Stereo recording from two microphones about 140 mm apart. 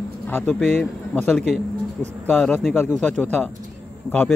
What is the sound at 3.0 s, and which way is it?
Speech, 10° left (ahead or behind).